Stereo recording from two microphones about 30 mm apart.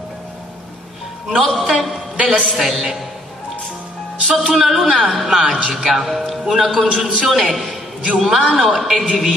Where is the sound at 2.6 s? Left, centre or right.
Centre.